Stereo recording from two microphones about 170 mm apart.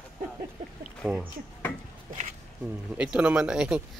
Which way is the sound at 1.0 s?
5° right (ahead or behind).